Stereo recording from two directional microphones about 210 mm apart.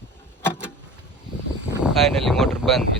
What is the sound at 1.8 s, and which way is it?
Speech, centre (ahead or behind).